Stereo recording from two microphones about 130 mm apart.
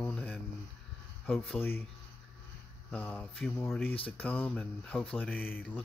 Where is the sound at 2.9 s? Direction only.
10° left (ahead or behind).